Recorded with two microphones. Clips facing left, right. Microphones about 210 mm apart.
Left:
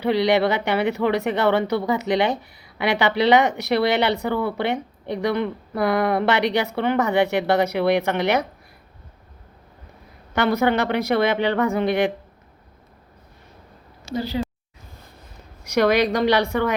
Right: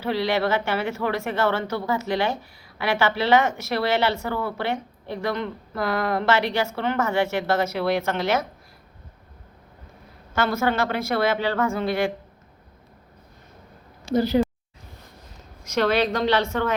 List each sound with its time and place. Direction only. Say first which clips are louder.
0.0 s speech: left 5 dB; 15° left (ahead or behind)
10.3 s speech: left 3 dB; 15° left (ahead or behind)
14.1 s speech: right 5 dB; 50° right (ahead or behind)
15.6 s speech: left 3 dB; 15° left (ahead or behind)